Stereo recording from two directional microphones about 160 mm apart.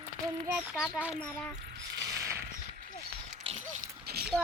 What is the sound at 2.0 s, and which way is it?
Mechanisms, 20° right (ahead or behind).